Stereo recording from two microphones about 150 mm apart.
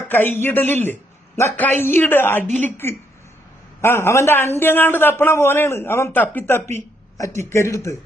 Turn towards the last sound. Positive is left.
turn(degrees=20)  # may be behind; listen again after turning